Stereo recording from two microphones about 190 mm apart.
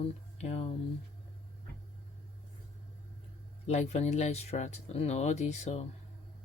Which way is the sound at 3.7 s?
35° left (ahead or behind).